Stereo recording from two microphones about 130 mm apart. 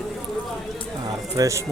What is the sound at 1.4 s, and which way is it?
Speech, 25° right (ahead or behind).